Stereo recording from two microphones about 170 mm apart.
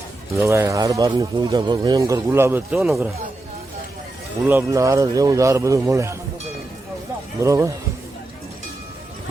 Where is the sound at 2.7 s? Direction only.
Centre (ahead or behind).